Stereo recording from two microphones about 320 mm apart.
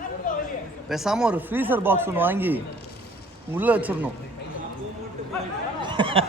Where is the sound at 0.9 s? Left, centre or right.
Centre.